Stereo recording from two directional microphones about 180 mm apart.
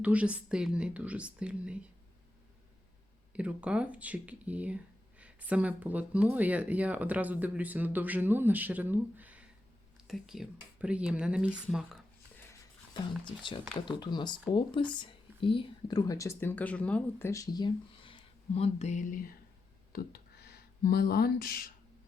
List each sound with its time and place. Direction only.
0.0 s speech: 10° right (ahead or behind)
3.3 s speech: 5° right (ahead or behind)
12.9 s speech: 25° left (ahead or behind); by 19.3 s 45° left (ahead or behind)
19.9 s speech: 60° left (ahead or behind)